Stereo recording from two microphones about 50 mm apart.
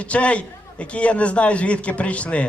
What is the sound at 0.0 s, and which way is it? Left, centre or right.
A man's voice, left.